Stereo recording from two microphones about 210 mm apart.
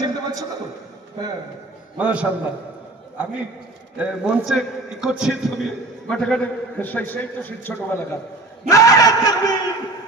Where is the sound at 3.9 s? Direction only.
5° right (ahead or behind); by 7.7 s 10° left (ahead or behind).